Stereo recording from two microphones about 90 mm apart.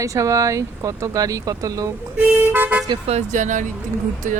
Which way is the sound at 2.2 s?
20° right (ahead or behind).